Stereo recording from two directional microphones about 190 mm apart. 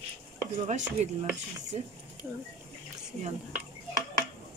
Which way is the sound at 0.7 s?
40° right (ahead or behind).